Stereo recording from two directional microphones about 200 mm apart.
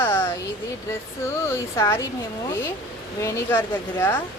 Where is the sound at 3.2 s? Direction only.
15° left (ahead or behind).